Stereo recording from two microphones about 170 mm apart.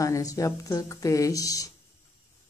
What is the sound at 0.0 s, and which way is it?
Speech, 20° left (ahead or behind).